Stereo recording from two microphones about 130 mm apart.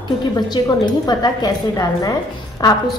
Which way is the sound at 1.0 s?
30° left (ahead or behind).